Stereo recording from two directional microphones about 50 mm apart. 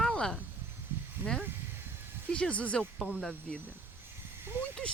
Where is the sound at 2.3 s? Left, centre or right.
Left.